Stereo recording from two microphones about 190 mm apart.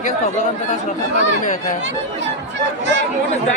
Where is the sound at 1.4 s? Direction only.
40° left (ahead or behind).